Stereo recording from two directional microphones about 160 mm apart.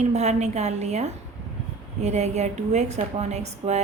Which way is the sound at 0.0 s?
45° right (ahead or behind).